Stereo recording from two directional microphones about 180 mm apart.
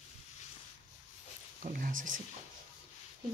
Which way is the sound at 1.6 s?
50° right (ahead or behind).